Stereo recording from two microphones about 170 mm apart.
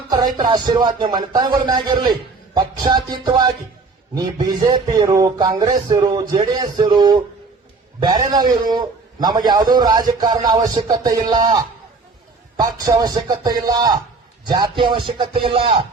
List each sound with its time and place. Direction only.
0.2 s speech: 25° right (ahead or behind)